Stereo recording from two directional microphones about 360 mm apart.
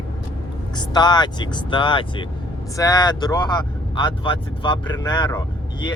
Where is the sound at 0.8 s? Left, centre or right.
Centre.